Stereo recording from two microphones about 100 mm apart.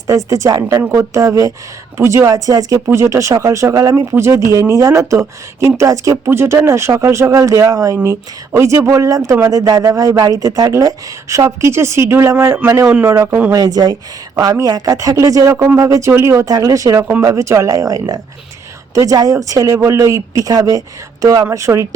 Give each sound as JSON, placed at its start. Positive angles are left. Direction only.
{"t": 0.3, "sound": "a woman's voice", "side_deg": -30}
{"t": 13.2, "sound": "speech", "side_deg": -15}
{"t": 13.5, "sound": "speech", "side_deg": -40}